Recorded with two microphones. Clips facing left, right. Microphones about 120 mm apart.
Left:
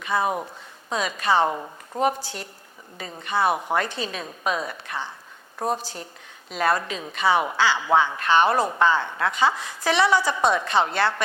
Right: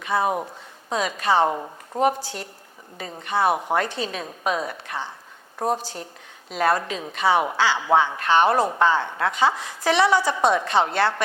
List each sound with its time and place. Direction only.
0.0 s speech: 45° right (ahead or behind)
0.3 s speech: 25° right (ahead or behind)
0.9 s a woman's voice: 50° right (ahead or behind)
1.5 s speech: 25° right (ahead or behind)
2.0 s a woman's voice: 50° right (ahead or behind); by 5.8 s 35° right (ahead or behind)
5.8 s speech: 60° right (ahead or behind)
6.5 s a woman's voice: 45° right (ahead or behind)
7.6 s speech: 60° right (ahead or behind)
7.9 s a woman's voice: 40° right (ahead or behind)